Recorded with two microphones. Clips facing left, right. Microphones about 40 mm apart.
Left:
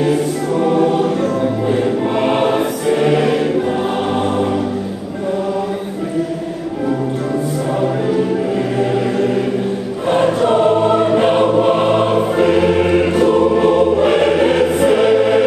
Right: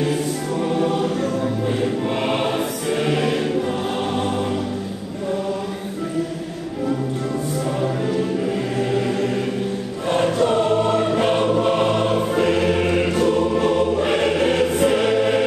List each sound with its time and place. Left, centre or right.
0.0 s choir: centre
7.8 s music: centre
10.0 s choir: centre
13.1 s music: centre